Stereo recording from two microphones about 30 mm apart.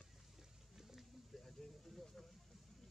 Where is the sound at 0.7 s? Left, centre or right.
Centre.